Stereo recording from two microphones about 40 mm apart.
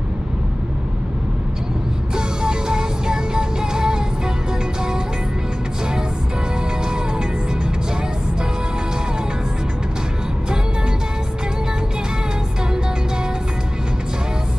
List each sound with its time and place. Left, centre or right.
2.1 s music: centre